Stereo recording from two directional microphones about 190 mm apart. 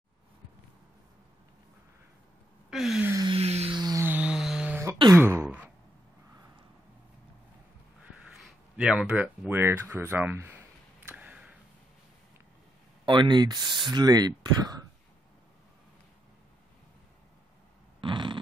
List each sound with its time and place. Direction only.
2.7 s gasp: centre (ahead or behind)
3.1 s music: 20° right (ahead or behind)
3.3 s a sound: 30° right (ahead or behind); by 4.9 s 10° right (ahead or behind)
5.1 s wail: 10° right (ahead or behind)
8.4 s speech: 5° right (ahead or behind)
11.1 s a sound: 10° right (ahead or behind)
13.0 s speech: 25° right (ahead or behind)
18.0 s fart: 25° right (ahead or behind)